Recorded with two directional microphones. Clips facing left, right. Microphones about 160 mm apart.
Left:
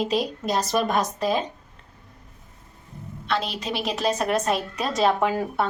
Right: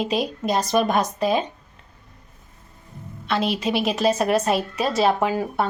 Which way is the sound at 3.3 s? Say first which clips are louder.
Right 5 dB; 5° right (ahead or behind).